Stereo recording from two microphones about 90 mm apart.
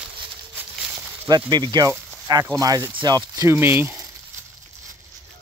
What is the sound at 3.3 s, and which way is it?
Speech, 25° right (ahead or behind).